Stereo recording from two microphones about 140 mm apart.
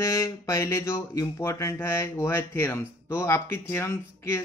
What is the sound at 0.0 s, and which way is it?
Speech, 25° left (ahead or behind).